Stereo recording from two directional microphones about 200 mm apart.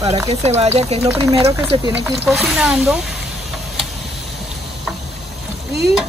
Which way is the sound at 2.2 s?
Centre (ahead or behind).